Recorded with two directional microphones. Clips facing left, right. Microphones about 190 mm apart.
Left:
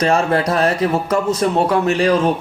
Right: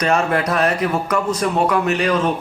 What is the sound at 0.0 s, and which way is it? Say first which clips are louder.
A man's voice: left 2 dB; 30° left (ahead or behind).